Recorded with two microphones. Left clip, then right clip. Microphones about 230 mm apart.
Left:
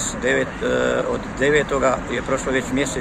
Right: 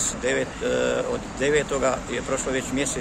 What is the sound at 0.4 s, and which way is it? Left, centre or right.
Speech, centre.